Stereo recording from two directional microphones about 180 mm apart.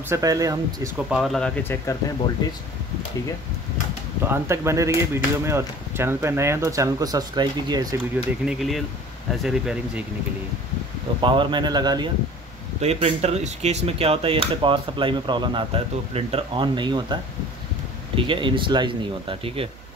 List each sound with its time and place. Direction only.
0.1 s speech: 20° right (ahead or behind)
1.1 s speech: centre (ahead or behind); by 2.6 s 25° left (ahead or behind)
4.2 s speech: 15° right (ahead or behind)
8.5 s speech: centre (ahead or behind)
11.1 s speech: 25° right (ahead or behind)
12.8 s speech: 35° right (ahead or behind)